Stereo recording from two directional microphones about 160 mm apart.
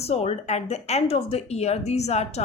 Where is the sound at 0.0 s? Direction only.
40° left (ahead or behind).